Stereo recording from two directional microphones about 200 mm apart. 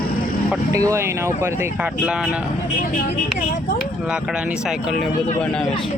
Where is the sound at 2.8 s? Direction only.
50° left (ahead or behind).